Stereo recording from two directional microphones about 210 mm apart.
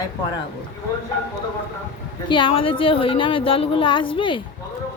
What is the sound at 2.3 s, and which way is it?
A woman's voice, 25° left (ahead or behind).